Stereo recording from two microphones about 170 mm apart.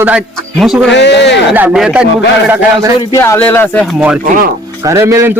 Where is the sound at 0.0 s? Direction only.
10° right (ahead or behind).